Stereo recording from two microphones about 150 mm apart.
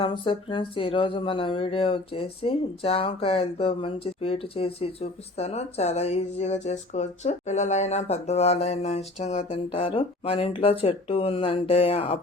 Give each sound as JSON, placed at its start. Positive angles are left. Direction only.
{"t": 0.0, "sound": "speech", "side_deg": 35}